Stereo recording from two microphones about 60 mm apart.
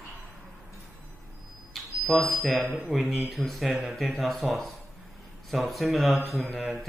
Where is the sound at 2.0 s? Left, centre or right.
Centre.